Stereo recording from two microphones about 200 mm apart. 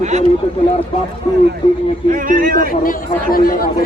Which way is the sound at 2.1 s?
45° right (ahead or behind).